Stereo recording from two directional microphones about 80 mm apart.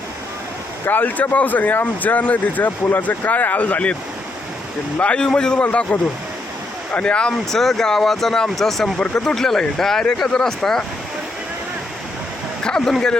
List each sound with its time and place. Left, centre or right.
0.9 s speech: left
4.9 s speech: centre
12.6 s speech: centre